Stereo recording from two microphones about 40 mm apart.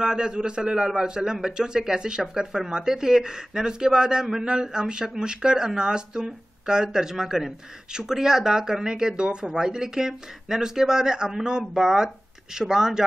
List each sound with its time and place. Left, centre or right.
0.0 s speech: centre